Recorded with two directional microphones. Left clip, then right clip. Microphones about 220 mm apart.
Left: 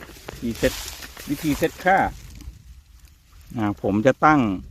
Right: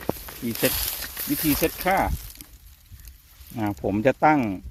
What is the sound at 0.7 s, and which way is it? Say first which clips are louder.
Snake: right 3 dB; 50° right (ahead or behind).